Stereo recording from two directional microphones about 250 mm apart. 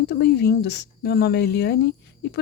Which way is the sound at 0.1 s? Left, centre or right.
Left.